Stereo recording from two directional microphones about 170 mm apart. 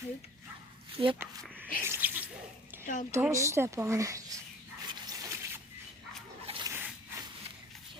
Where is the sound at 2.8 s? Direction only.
50° left (ahead or behind).